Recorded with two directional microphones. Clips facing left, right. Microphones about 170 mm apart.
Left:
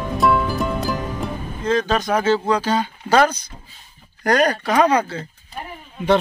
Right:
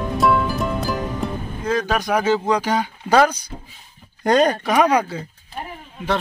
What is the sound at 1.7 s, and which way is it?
Speech, 10° right (ahead or behind).